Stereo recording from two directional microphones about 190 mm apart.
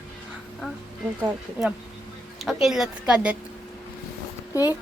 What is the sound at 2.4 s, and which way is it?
Speech, centre (ahead or behind).